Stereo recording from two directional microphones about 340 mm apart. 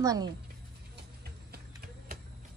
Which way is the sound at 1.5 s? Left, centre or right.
Right.